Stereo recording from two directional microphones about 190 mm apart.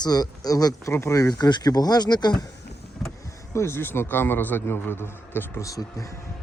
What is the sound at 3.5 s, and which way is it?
A man's voice, 15° left (ahead or behind).